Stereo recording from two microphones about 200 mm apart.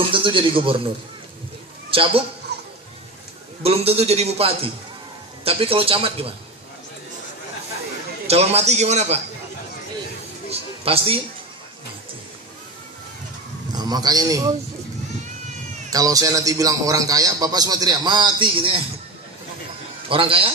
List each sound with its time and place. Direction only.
0.1 s a man's voice: 25° right (ahead or behind)
1.9 s a man's voice: 25° right (ahead or behind)
2.5 s music: 55° right (ahead or behind)
3.6 s a man's voice: 30° right (ahead or behind)
8.3 s a man's voice: 30° right (ahead or behind)
10.5 s a man's voice: 30° right (ahead or behind)
13.7 s speech: 20° right (ahead or behind)
15.9 s a man's voice: 15° right (ahead or behind)
20.1 s a man's voice: 25° right (ahead or behind)